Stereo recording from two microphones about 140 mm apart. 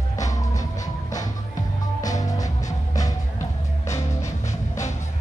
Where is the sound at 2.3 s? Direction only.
25° left (ahead or behind).